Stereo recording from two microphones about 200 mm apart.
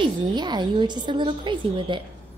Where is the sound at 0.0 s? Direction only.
20° right (ahead or behind).